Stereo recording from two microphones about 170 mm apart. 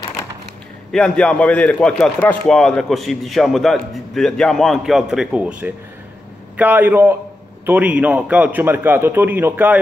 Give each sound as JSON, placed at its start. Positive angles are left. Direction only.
{"t": 0.9, "sound": "a man's voice", "side_deg": 5}